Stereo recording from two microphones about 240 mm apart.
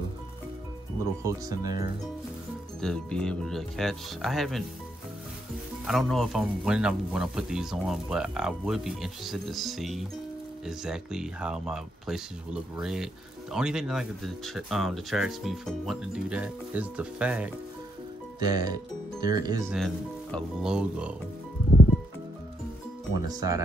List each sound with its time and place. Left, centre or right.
1.2 s speech: centre
2.8 s speech: centre
5.9 s speech: centre
18.4 s speech: centre
19.7 s speech: centre
23.1 s speech: centre